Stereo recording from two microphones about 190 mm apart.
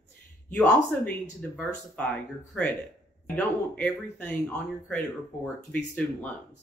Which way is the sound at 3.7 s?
10° left (ahead or behind).